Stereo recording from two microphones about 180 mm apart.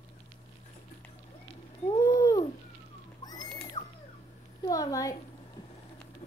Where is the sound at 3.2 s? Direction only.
20° left (ahead or behind).